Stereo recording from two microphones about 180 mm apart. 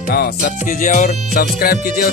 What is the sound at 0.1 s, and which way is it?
Music, 55° left (ahead or behind).